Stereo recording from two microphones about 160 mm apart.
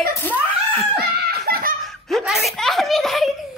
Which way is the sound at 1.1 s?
70° right (ahead or behind).